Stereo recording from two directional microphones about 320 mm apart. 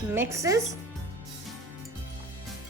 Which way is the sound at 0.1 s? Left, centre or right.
Centre.